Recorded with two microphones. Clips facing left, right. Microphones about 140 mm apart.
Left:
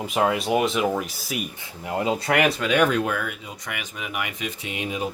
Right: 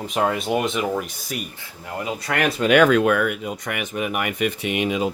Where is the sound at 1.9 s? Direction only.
25° left (ahead or behind).